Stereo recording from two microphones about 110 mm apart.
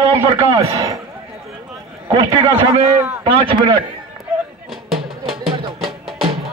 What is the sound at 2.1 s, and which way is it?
Speech, 45° right (ahead or behind).